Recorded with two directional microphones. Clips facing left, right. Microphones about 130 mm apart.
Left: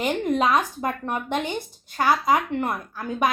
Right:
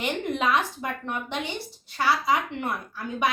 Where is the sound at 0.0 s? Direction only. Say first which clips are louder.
Left 4 dB; 40° left (ahead or behind).